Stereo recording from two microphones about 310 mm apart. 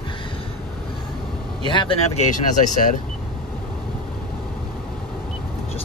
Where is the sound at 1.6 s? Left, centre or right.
Centre.